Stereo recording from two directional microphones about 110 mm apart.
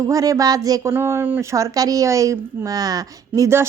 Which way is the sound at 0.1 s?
30° right (ahead or behind).